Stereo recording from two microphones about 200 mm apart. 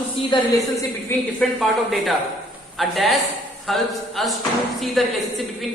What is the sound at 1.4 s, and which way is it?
A woman's voice, centre (ahead or behind).